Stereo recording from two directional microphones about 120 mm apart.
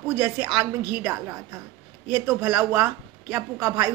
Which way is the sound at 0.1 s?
20° right (ahead or behind).